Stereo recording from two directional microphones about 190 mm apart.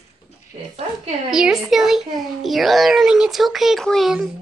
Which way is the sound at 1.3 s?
5° right (ahead or behind).